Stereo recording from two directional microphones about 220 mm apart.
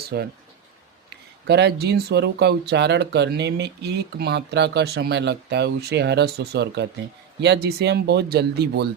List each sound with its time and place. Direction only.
0.0 s speech: 45° right (ahead or behind)
1.5 s speech: 50° right (ahead or behind)